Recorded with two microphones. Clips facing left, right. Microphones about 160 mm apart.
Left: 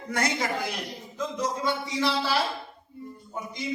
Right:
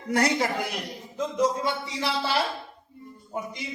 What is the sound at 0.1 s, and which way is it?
Speech, 35° right (ahead or behind).